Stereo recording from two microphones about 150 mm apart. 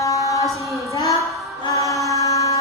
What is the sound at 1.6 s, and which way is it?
Chant, 20° left (ahead or behind).